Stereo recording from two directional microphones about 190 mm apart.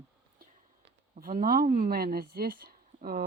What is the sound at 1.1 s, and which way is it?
Speech, 45° right (ahead or behind).